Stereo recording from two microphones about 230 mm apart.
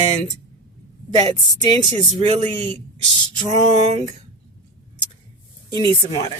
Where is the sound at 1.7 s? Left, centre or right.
Right.